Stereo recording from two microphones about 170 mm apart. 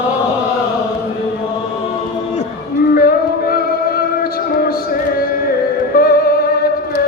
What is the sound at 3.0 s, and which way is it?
Music, 65° left (ahead or behind).